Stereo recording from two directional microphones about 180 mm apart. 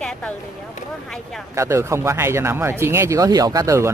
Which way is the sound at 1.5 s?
15° right (ahead or behind).